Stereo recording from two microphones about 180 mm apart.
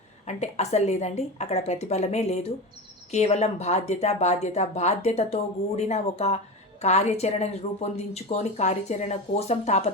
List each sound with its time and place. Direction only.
0.3 s speech: 40° left (ahead or behind)